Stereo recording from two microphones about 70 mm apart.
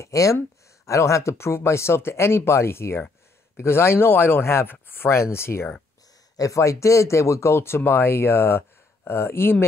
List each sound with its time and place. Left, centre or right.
0.0 s speech: left
6.3 s speech: left